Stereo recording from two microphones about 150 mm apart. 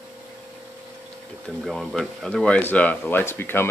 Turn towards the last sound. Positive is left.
turn(degrees=15)  # may be behind; listen again after turning